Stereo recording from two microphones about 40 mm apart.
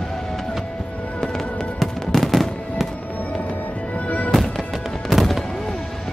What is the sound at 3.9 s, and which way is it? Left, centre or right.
Music, left.